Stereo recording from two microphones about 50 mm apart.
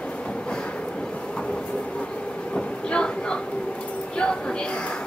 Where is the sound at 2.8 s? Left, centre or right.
Centre.